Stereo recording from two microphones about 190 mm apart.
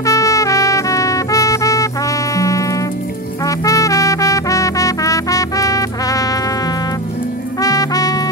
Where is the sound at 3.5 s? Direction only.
15° left (ahead or behind).